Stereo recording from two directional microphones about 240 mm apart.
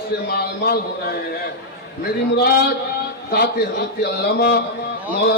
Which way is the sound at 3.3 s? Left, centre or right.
Left.